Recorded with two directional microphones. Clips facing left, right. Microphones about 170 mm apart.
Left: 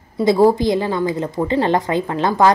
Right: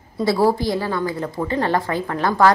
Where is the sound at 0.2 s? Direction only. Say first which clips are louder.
Left 4 dB; 20° left (ahead or behind).